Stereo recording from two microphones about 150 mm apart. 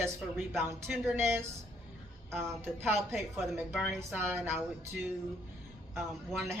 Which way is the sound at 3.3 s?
Centre (ahead or behind).